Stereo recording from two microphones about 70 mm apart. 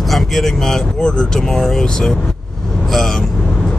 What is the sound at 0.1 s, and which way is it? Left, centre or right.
Speech, centre.